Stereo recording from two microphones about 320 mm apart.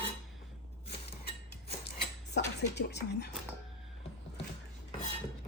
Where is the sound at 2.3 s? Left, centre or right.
Left.